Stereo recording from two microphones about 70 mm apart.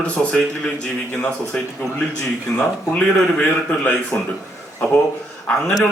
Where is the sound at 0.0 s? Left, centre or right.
Centre.